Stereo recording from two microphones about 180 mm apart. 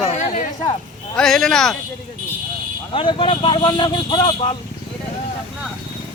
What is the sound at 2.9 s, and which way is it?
Speech, 30° left (ahead or behind).